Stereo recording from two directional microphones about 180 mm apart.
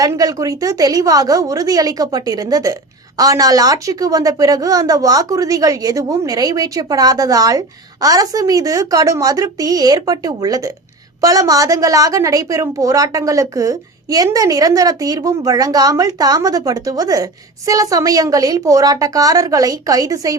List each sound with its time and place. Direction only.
0.0 s a woman's voice: 20° right (ahead or behind)